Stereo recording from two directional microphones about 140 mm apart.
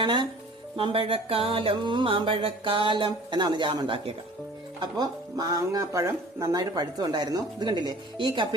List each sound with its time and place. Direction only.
0.0 s speech: 35° right (ahead or behind)
0.8 s music: 35° right (ahead or behind)
4.8 s speech: 30° right (ahead or behind)